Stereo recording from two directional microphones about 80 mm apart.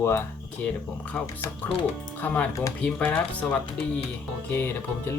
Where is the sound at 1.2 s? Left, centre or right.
Centre.